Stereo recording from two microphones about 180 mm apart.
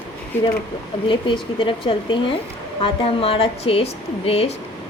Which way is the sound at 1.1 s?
30° left (ahead or behind).